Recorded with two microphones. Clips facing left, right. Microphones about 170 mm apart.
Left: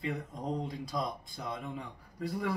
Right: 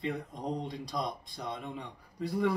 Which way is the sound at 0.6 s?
Centre (ahead or behind).